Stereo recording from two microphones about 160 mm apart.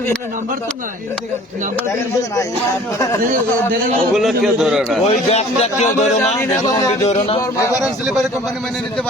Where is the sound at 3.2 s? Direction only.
60° right (ahead or behind).